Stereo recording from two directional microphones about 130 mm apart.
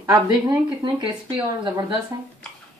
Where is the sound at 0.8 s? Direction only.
40° right (ahead or behind).